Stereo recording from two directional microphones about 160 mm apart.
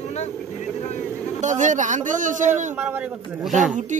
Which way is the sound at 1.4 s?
50° right (ahead or behind).